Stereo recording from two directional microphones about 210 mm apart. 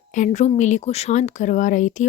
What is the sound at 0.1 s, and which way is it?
Speech, 35° left (ahead or behind).